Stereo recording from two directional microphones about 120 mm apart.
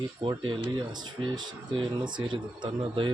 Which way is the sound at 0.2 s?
45° right (ahead or behind).